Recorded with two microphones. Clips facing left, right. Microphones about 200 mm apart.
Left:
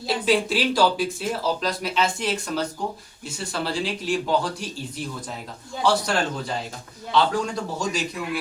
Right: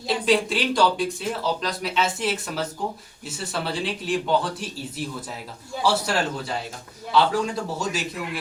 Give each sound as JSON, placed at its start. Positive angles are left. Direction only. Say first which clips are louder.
{"t": 0.3, "sound": "speech", "louder": "even", "side_deg": 0}